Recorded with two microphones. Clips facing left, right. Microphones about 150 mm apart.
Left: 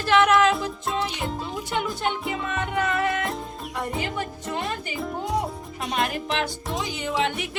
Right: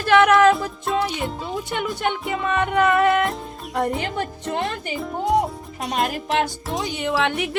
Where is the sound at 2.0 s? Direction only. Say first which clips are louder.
Right 3 dB; 55° right (ahead or behind).